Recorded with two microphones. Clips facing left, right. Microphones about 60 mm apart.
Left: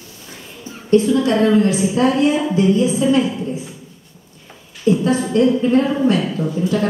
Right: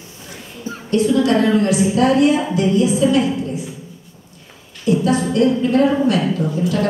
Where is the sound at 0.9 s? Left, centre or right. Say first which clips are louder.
Left 1 dB; left.